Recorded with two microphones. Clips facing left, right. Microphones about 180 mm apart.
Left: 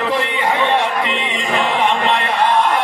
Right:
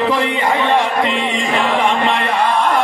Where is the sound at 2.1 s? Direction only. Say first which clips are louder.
Even; 50° right (ahead or behind).